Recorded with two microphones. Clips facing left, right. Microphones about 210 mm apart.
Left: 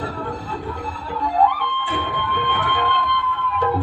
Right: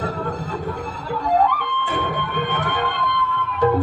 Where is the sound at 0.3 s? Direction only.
45° right (ahead or behind).